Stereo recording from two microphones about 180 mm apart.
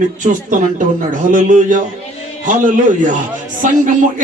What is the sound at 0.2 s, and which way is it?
A man's voice, 45° right (ahead or behind).